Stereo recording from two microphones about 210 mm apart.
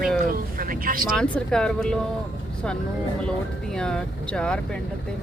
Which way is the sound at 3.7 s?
5° left (ahead or behind).